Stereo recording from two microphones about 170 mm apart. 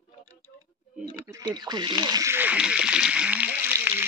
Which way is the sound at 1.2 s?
20° right (ahead or behind).